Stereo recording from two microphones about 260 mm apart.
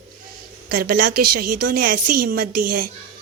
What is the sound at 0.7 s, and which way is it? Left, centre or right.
Speech, right.